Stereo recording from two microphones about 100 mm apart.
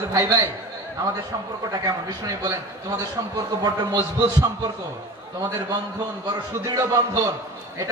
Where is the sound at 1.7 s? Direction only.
40° right (ahead or behind).